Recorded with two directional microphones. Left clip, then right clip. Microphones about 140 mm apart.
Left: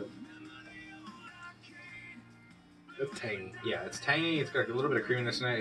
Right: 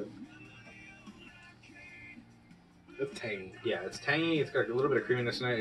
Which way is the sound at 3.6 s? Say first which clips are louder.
Even; 15° left (ahead or behind).